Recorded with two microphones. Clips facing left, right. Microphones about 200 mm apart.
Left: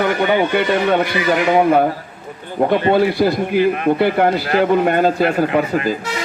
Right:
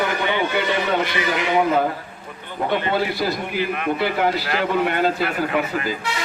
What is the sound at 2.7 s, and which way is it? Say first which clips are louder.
A man's voice: left 7 dB; 45° left (ahead or behind).